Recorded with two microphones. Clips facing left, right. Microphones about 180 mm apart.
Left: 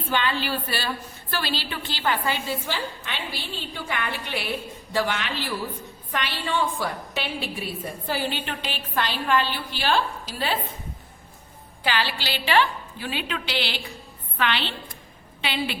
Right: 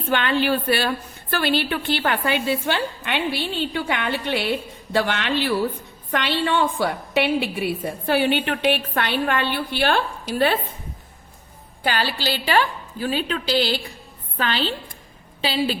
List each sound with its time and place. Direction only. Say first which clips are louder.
0.1 s a woman's voice: right 6 dB; 60° right (ahead or behind)
11.8 s a woman's voice: right 3 dB; 45° right (ahead or behind)